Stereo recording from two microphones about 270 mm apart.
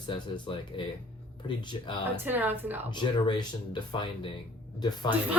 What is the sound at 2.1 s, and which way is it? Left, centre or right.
Speech, centre.